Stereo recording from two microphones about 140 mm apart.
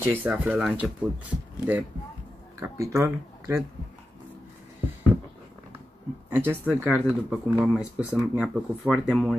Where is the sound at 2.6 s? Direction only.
20° right (ahead or behind).